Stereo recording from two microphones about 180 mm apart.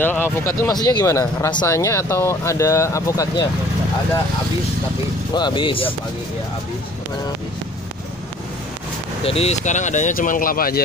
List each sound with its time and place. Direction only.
0.0 s speech: 10° left (ahead or behind)
5.3 s speech: 25° left (ahead or behind)
9.2 s speech: 35° left (ahead or behind); by 10.8 s 55° left (ahead or behind)